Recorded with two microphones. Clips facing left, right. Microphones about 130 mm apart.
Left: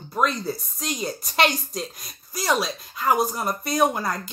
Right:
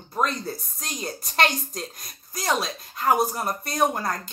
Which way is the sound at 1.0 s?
10° left (ahead or behind).